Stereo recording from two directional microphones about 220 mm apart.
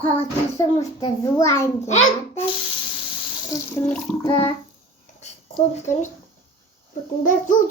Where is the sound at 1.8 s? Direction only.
30° left (ahead or behind).